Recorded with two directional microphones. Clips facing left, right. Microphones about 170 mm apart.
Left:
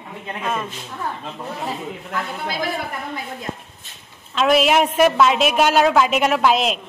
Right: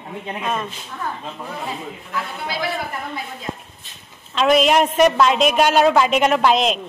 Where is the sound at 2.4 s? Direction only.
45° left (ahead or behind).